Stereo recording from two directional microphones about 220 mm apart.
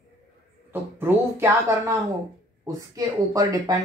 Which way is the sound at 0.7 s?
10° right (ahead or behind).